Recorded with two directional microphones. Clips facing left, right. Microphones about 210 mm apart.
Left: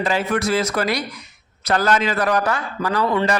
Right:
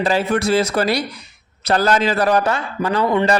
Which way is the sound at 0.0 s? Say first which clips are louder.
Right 3 dB; 35° right (ahead or behind).